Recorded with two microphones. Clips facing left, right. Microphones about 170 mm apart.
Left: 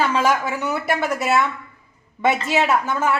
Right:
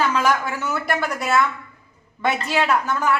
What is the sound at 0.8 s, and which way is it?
Speech, 5° left (ahead or behind).